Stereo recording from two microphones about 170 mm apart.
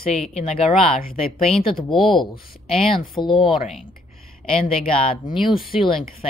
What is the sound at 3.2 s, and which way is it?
Speech, 30° left (ahead or behind).